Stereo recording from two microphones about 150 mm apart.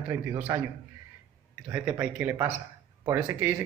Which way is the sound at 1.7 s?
10° right (ahead or behind).